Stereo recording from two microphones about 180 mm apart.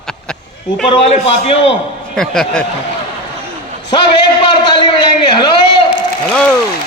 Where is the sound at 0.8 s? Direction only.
30° left (ahead or behind).